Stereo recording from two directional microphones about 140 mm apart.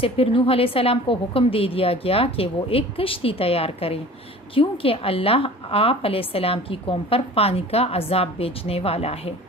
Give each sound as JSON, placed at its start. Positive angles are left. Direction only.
{"t": 0.0, "sound": "a woman's voice", "side_deg": 40}